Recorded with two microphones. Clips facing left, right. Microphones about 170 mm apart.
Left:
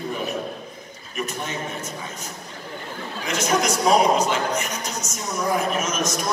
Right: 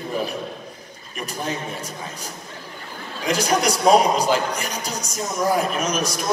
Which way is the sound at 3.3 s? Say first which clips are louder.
Right 2 dB; 35° right (ahead or behind).